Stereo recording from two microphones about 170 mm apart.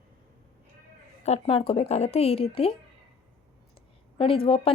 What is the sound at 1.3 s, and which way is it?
Speech, 35° left (ahead or behind).